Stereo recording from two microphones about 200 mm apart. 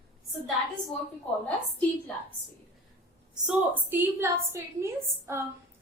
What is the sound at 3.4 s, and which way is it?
A woman's voice, 10° right (ahead or behind).